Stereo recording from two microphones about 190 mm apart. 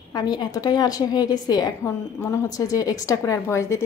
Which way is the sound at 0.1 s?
20° left (ahead or behind).